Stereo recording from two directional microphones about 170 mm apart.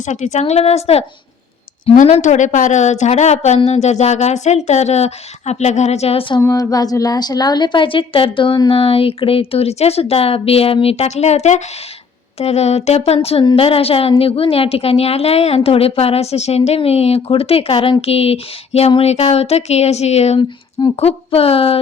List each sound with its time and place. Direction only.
0.0 s speech: 45° left (ahead or behind)
6.4 s speech: 20° left (ahead or behind); by 21.8 s 35° left (ahead or behind)